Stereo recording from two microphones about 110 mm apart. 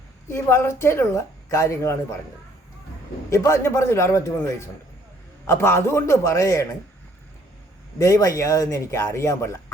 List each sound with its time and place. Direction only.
0.3 s speech: 25° left (ahead or behind)
3.2 s speech: 25° left (ahead or behind)
5.5 s speech: 25° left (ahead or behind)
7.9 s speech: 30° left (ahead or behind)